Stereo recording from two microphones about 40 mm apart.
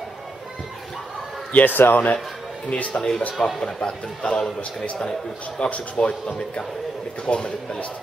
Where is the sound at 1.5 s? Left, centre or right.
Left.